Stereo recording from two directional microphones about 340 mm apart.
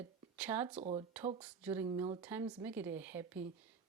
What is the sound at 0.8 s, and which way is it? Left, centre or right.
Speech, centre.